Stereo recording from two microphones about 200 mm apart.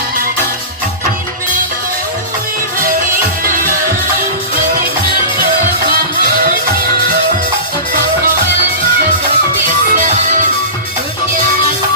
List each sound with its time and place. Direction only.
2.8 s music: 45° right (ahead or behind)
5.9 s music: 50° right (ahead or behind)
9.6 s music: 40° right (ahead or behind)